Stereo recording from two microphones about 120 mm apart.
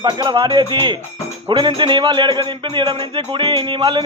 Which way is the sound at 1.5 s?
45° right (ahead or behind).